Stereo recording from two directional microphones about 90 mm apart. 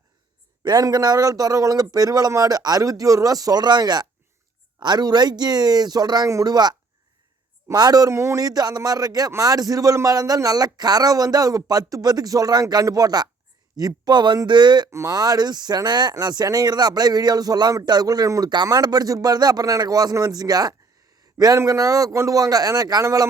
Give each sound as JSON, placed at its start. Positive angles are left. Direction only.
{"t": 0.6, "sound": "speech", "side_deg": -45}
{"t": 8.4, "sound": "a man's voice", "side_deg": -45}
{"t": 14.8, "sound": "speech", "side_deg": -30}
{"t": 15.1, "sound": "speech", "side_deg": -45}